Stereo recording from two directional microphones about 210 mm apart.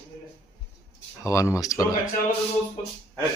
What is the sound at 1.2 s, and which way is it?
Speech, 15° left (ahead or behind).